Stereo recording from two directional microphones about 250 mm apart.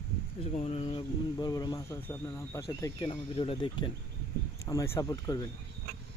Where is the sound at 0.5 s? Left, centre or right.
Left.